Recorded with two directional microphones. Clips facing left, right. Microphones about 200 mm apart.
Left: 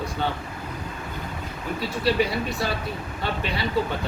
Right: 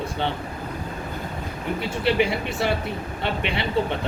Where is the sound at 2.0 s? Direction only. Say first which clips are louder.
Right 1 dB; 25° right (ahead or behind).